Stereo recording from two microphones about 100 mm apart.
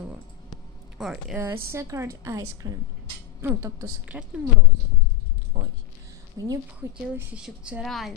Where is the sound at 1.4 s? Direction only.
25° right (ahead or behind).